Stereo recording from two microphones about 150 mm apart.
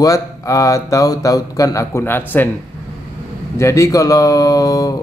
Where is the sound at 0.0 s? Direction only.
20° left (ahead or behind).